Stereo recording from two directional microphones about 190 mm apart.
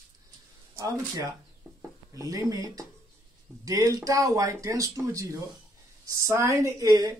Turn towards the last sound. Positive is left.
turn(degrees=-20)  # may be behind; listen again after turning